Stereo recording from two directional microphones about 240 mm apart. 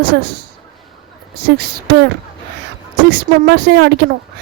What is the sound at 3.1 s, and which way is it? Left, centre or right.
Speech, right.